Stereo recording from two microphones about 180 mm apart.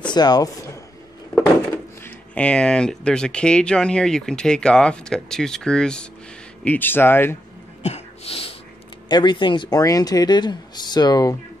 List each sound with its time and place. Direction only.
0.1 s speech: 20° left (ahead or behind)
2.0 s speech: 5° left (ahead or behind)
7.8 s a sound: 35° left (ahead or behind)
9.1 s speech: 25° left (ahead or behind)